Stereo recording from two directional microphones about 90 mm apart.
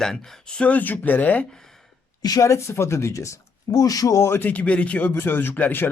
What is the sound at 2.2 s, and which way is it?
A man's voice, 40° left (ahead or behind).